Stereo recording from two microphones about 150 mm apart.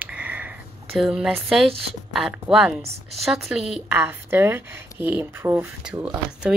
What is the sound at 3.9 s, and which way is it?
Speech, 15° right (ahead or behind).